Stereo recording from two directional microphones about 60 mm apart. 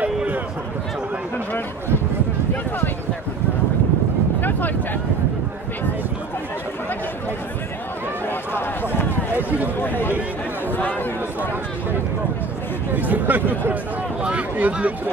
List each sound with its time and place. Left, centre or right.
0.0 s a sound: right
4.4 s a sound: left
9.4 s speech: right
9.8 s speech: left
10.8 s chatter: left
12.9 s speech: right